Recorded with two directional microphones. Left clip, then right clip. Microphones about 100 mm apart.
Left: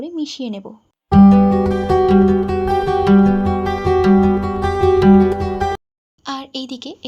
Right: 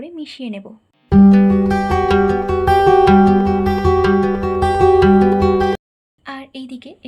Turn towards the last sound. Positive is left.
turn(degrees=50)  # may be behind; listen again after turning